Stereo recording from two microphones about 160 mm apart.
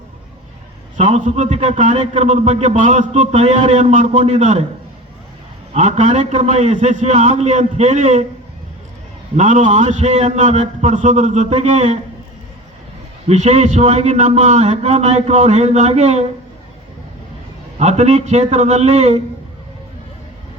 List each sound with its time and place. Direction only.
0.9 s a man's voice: 50° right (ahead or behind)
5.7 s a man's voice: 45° right (ahead or behind)
9.3 s a man's voice: 45° right (ahead or behind)
13.2 s a man's voice: 45° right (ahead or behind)
17.7 s a man's voice: 45° right (ahead or behind)